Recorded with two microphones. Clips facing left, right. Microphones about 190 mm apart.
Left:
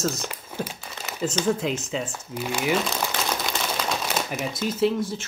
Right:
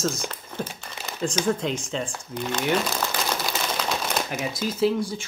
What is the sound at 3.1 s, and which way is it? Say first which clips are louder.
Crumpling: even; centre (ahead or behind).